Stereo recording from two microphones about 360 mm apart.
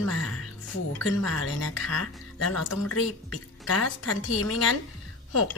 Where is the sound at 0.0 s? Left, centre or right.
Left.